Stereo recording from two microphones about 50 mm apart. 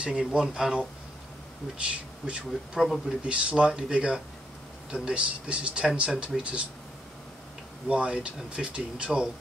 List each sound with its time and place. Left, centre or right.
0.0 s speech: right
1.9 s speech: right
2.8 s speech: centre
3.3 s speech: right
7.9 s speech: right